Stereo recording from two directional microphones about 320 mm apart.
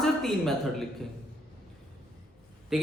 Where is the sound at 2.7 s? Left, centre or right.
Centre.